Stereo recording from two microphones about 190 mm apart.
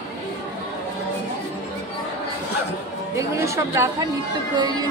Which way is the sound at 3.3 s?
15° right (ahead or behind).